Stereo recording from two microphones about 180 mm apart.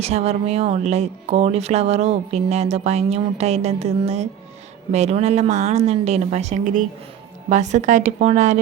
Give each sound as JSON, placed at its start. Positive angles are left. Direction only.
{"t": 0.0, "sound": "speech", "side_deg": -35}